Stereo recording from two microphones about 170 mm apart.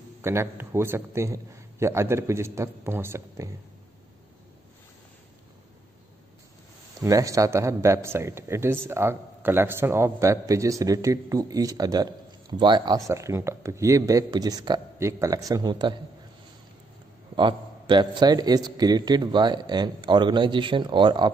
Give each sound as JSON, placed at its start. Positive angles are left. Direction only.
{"t": 0.2, "sound": "a man's voice", "side_deg": -15}
{"t": 7.0, "sound": "a man's voice", "side_deg": -20}
{"t": 17.4, "sound": "a man's voice", "side_deg": -30}